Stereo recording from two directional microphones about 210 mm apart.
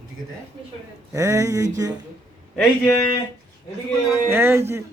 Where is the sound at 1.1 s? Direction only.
15° right (ahead or behind).